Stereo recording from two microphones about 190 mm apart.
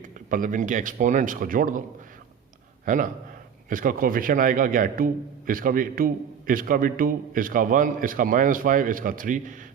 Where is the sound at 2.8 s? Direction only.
45° right (ahead or behind).